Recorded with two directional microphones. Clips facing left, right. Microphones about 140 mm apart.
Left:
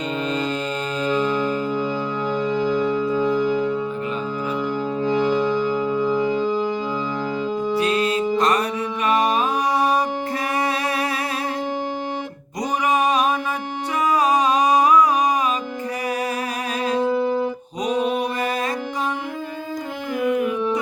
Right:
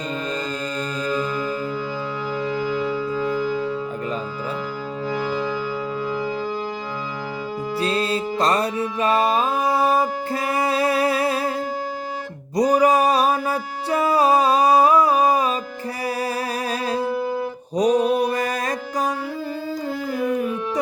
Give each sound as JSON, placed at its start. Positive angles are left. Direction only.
{"t": 2.4, "sound": "music", "side_deg": -5}
{"t": 5.0, "sound": "music", "side_deg": -5}
{"t": 7.8, "sound": "music", "side_deg": -30}
{"t": 12.5, "sound": "a sound", "side_deg": -35}
{"t": 13.9, "sound": "music", "side_deg": -30}
{"t": 17.0, "sound": "music", "side_deg": -10}
{"t": 17.7, "sound": "mantra", "side_deg": -35}